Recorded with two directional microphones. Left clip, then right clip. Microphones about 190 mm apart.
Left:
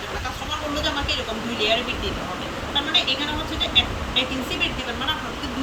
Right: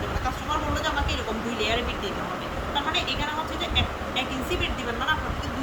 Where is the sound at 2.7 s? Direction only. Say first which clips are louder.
Left 6 dB; 10° right (ahead or behind).